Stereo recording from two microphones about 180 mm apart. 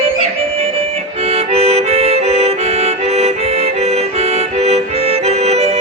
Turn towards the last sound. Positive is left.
turn(degrees=-35)  # may be behind; listen again after turning